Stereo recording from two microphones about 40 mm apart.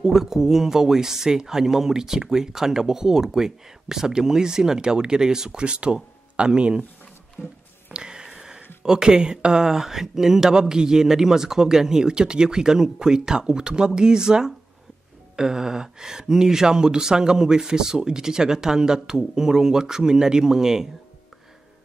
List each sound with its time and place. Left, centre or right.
0.0 s speech: centre
7.4 s speech: centre
7.9 s a sound: centre
8.8 s speech: centre